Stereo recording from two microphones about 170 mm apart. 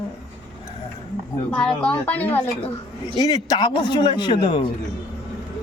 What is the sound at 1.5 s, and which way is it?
Speech, 5° left (ahead or behind).